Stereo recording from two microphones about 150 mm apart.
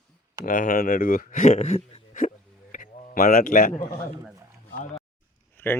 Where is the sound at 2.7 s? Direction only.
65° left (ahead or behind).